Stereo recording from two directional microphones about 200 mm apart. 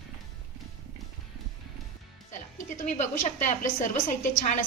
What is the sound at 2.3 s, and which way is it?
A woman's voice, 35° left (ahead or behind).